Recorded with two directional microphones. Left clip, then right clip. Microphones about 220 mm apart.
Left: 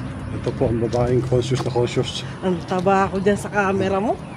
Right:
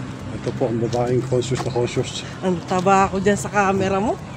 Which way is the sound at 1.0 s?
15° left (ahead or behind).